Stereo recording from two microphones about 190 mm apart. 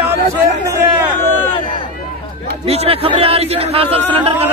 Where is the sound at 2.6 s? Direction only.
30° right (ahead or behind).